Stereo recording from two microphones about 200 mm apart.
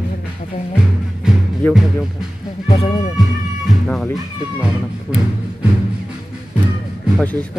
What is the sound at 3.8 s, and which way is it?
Music, centre (ahead or behind).